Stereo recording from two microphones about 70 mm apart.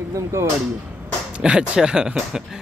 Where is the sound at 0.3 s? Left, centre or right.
Right.